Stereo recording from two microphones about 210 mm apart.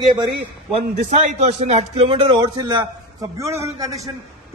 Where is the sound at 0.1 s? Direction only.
25° right (ahead or behind).